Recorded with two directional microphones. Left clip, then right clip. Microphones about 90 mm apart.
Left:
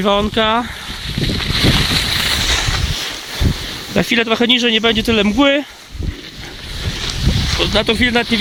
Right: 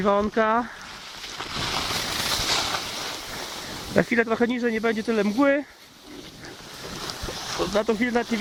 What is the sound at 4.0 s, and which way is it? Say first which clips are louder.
Speech: left 7 dB; 45° left (ahead or behind).